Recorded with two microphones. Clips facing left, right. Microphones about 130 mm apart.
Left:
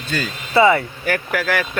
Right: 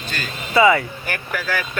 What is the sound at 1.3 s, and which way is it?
Speech, 80° left.